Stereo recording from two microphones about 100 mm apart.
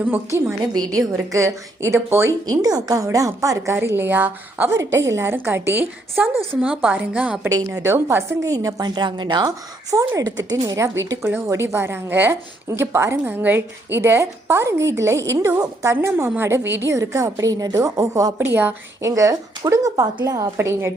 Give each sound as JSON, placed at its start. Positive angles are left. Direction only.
{"t": 0.3, "sound": "a woman's voice", "side_deg": -30}
{"t": 0.7, "sound": "a woman's voice", "side_deg": -40}
{"t": 2.5, "sound": "a woman's voice", "side_deg": -40}
{"t": 6.2, "sound": "a woman's voice", "side_deg": -15}
{"t": 7.5, "sound": "a woman's voice", "side_deg": -35}
{"t": 10.2, "sound": "a woman's voice", "side_deg": -35}
{"t": 18.3, "sound": "a woman's voice", "side_deg": -20}
{"t": 19.0, "sound": "a woman's voice", "side_deg": -35}
{"t": 20.6, "sound": "a woman's voice", "side_deg": -25}